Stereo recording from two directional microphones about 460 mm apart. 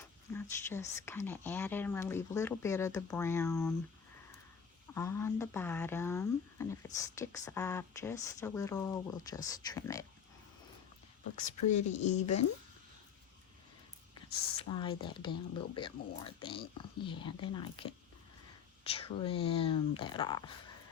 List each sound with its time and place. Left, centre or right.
0.3 s speech: centre
4.9 s speech: centre
11.3 s speech: centre
14.7 s speech: centre